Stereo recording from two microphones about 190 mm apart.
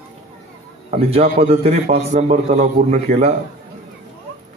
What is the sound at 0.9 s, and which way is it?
A man's voice, 30° right (ahead or behind).